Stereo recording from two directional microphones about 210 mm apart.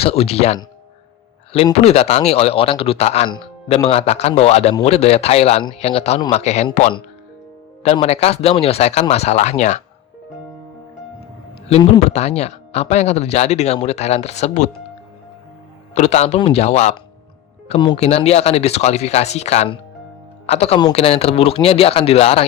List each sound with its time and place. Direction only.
0.0 s speech: 30° left (ahead or behind)
1.5 s speech: 30° left (ahead or behind)
7.9 s speech: 30° left (ahead or behind)
11.7 s speech: 30° left (ahead or behind)
16.0 s speech: 30° left (ahead or behind)